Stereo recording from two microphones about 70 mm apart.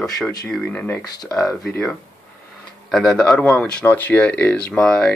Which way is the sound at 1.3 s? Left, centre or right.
Centre.